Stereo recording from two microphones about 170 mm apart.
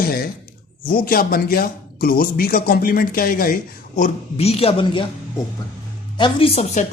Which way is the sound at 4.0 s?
35° left (ahead or behind).